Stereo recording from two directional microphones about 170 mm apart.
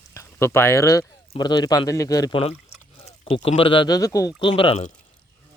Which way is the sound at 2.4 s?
35° left (ahead or behind).